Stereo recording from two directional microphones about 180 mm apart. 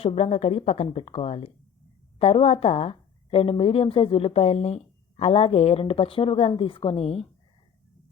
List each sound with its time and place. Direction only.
0.0 s speech: 35° left (ahead or behind)